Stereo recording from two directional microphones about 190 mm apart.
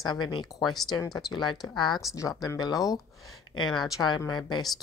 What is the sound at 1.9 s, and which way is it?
Speech, centre (ahead or behind).